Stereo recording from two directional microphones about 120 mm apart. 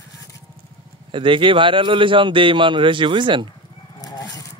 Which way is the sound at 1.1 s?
45° right (ahead or behind).